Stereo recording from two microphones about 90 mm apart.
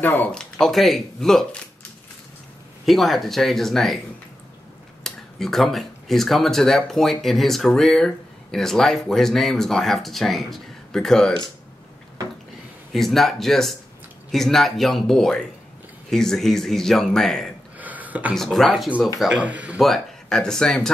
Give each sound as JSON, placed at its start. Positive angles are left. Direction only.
{"t": 0.0, "sound": "speech", "side_deg": 20}
{"t": 0.3, "sound": "speech", "side_deg": 10}
{"t": 2.8, "sound": "speech", "side_deg": 0}
{"t": 5.0, "sound": "speech", "side_deg": 5}
{"t": 12.9, "sound": "speech", "side_deg": 0}
{"t": 17.7, "sound": "a sound", "side_deg": -20}
{"t": 18.3, "sound": "speech", "side_deg": 0}
{"t": 19.3, "sound": "speech", "side_deg": -15}
{"t": 19.8, "sound": "speech", "side_deg": 5}